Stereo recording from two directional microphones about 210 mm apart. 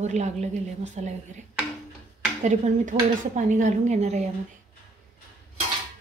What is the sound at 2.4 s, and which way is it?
A woman's voice, 35° right (ahead or behind).